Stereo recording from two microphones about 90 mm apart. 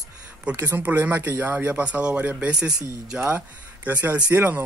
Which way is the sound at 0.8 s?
20° right (ahead or behind).